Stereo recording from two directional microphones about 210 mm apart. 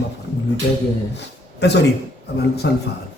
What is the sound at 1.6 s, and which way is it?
A man's voice, 55° left (ahead or behind).